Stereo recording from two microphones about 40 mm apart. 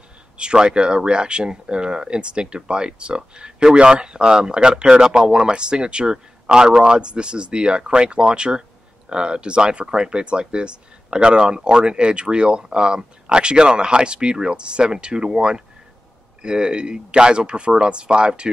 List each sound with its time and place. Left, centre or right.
0.4 s speech: right